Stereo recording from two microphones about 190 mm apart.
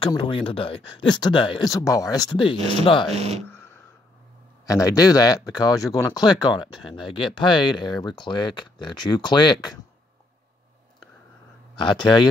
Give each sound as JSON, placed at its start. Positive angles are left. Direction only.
{"t": 0.0, "sound": "speech", "side_deg": 25}
{"t": 2.5, "sound": "speech", "side_deg": -30}
{"t": 2.8, "sound": "speech", "side_deg": 25}
{"t": 4.6, "sound": "speech", "side_deg": 20}
{"t": 11.8, "sound": "speech", "side_deg": 25}